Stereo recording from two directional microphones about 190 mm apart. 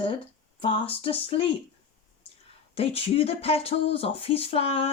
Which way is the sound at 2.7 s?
30° left (ahead or behind).